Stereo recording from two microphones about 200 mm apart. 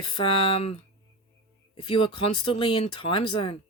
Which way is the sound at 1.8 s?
25° left (ahead or behind).